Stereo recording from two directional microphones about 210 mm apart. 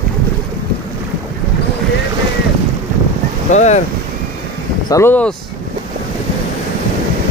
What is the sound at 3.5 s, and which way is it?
Boat, 35° left (ahead or behind).